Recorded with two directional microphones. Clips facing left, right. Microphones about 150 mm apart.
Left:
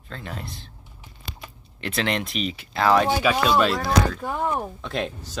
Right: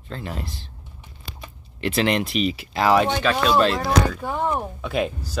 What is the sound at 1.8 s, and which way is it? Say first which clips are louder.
Speech: right 5 dB; 5° right (ahead or behind).